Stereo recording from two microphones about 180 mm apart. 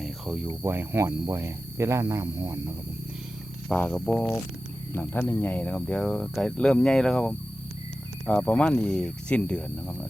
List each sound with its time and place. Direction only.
0.0 s a sound: 5° right (ahead or behind)
0.6 s speech: 10° right (ahead or behind)
3.7 s speech: 5° left (ahead or behind)